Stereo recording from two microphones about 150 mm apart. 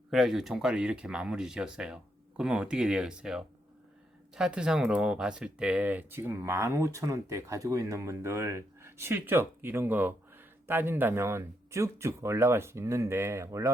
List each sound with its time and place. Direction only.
0.1 s speech: centre (ahead or behind); by 13.7 s 20° right (ahead or behind)